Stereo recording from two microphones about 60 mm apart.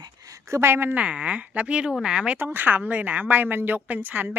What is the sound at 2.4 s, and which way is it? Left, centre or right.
A woman's voice, right.